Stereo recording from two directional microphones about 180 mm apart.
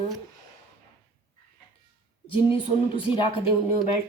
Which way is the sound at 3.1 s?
30° left (ahead or behind).